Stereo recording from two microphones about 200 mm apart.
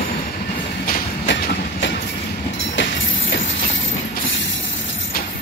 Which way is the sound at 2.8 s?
70° left (ahead or behind).